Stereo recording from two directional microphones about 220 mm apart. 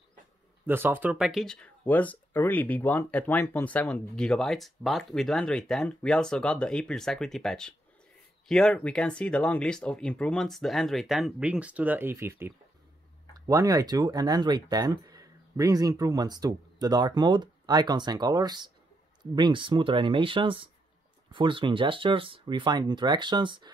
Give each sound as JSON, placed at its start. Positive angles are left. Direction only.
{"t": 0.7, "sound": "speech", "side_deg": -10}